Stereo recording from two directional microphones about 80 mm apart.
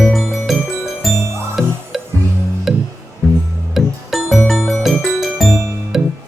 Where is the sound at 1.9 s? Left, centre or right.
Centre.